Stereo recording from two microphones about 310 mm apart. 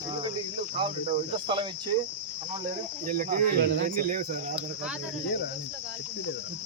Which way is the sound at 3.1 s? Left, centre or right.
Right.